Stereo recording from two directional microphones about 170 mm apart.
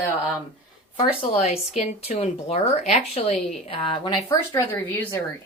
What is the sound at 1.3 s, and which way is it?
Speech, 40° left (ahead or behind).